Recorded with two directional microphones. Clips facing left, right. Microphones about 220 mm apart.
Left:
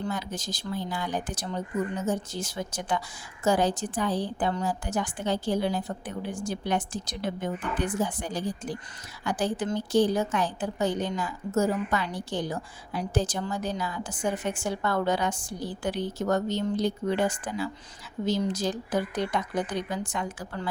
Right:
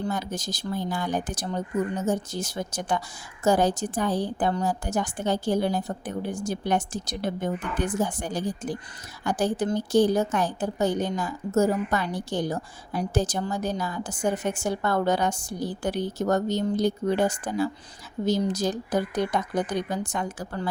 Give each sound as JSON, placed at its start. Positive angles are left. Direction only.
{"t": 0.1, "sound": "a woman's voice", "side_deg": -45}